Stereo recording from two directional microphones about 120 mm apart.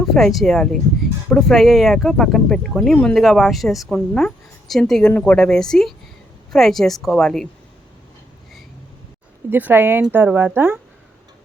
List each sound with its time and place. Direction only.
0.0 s a woman's voice: centre (ahead or behind)
9.5 s speech: 15° right (ahead or behind)